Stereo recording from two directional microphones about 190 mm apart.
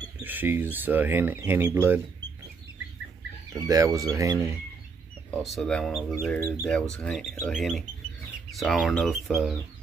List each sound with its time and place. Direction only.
0.2 s speech: 10° right (ahead or behind)
3.5 s speech: 20° right (ahead or behind)
5.3 s speech: centre (ahead or behind)
6.3 s speech: 15° left (ahead or behind)
6.7 s speech: 5° left (ahead or behind)